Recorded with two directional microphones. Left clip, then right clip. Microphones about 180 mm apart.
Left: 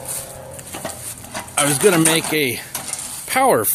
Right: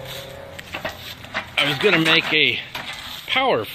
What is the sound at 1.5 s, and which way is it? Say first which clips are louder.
Speech: left 2 dB; 30° left (ahead or behind).